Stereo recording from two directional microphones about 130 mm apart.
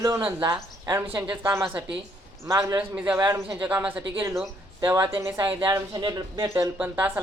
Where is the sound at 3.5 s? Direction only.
10° right (ahead or behind).